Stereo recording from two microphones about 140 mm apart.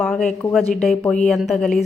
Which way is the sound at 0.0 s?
5° left (ahead or behind).